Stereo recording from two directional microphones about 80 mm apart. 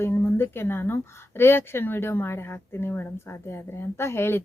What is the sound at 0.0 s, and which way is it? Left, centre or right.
A woman's voice, left.